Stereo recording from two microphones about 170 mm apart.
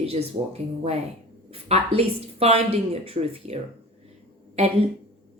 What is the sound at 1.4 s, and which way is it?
Speech, 35° right (ahead or behind).